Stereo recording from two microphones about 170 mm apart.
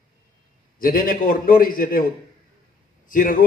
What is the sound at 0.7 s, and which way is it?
A man's voice, 60° left (ahead or behind).